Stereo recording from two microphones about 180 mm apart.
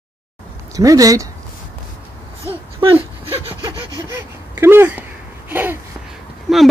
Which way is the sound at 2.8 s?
25° right (ahead or behind).